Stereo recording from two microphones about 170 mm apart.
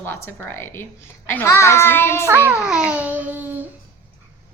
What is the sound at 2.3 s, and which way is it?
A child's voice, 10° right (ahead or behind).